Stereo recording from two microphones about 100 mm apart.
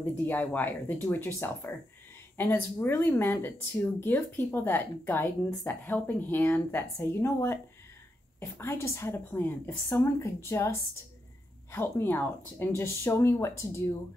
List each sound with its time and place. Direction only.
0.2 s speech: 20° left (ahead or behind)